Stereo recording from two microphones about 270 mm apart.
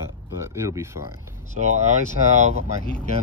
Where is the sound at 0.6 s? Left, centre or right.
Centre.